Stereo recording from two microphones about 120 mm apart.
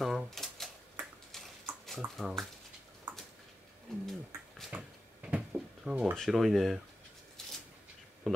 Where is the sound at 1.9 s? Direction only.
Centre (ahead or behind).